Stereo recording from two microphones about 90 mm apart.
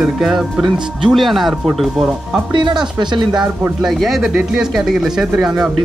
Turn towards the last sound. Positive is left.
turn(degrees=-5)  # may be behind; listen again after turning